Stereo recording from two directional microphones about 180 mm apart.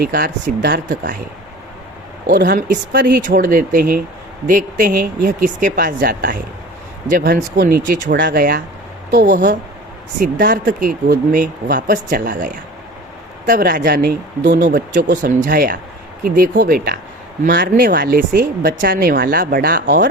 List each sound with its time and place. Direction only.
0.0 s speech: 55° right (ahead or behind)
2.3 s speech: 65° right (ahead or behind)
2.6 s speech: 50° right (ahead or behind)
10.2 s speech: 50° right (ahead or behind)